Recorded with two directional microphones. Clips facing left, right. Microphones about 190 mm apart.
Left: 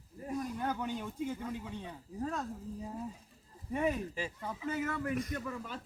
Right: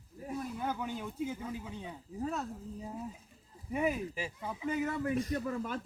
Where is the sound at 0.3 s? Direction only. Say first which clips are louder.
Left 1 dB; 5° right (ahead or behind).